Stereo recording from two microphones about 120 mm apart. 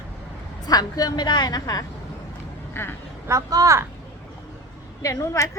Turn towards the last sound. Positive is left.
turn(degrees=25)  # may be behind; listen again after turning